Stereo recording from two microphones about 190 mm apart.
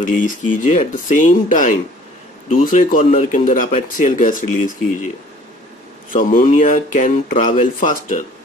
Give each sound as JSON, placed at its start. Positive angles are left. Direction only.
{"t": 0.0, "sound": "speech", "side_deg": 45}
{"t": 3.0, "sound": "speech", "side_deg": 35}
{"t": 6.1, "sound": "speech", "side_deg": 45}